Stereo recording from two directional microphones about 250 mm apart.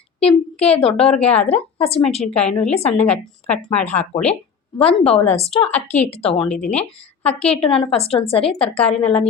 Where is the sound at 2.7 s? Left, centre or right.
Left.